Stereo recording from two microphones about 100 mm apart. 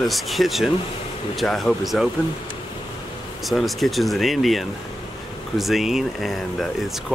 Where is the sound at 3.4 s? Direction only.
Centre (ahead or behind).